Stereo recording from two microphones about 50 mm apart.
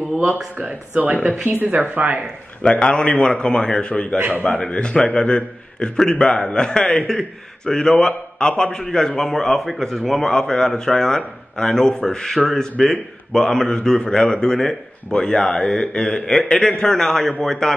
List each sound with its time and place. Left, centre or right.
0.6 s speech: right
2.6 s a man's voice: left
4.3 s a man's voice: left
4.6 s a man's voice: left; by 12.6 s centre
13.3 s a man's voice: centre